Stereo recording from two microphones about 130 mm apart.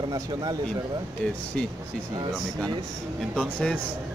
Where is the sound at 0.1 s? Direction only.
30° right (ahead or behind).